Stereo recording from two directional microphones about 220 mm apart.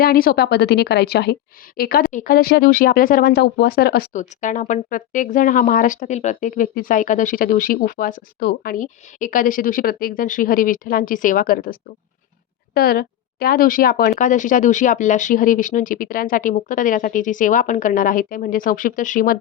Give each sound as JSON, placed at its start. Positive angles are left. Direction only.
{"t": 0.0, "sound": "a woman's voice", "side_deg": 40}